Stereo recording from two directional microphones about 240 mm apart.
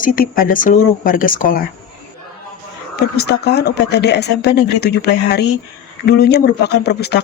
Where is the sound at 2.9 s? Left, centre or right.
Left.